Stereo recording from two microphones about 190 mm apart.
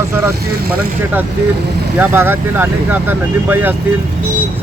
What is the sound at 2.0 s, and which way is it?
Speech, 10° right (ahead or behind).